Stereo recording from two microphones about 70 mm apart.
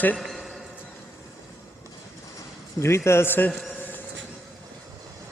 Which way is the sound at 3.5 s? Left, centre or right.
Centre.